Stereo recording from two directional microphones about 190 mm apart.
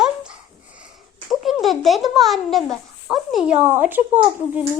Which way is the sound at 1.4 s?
Centre (ahead or behind).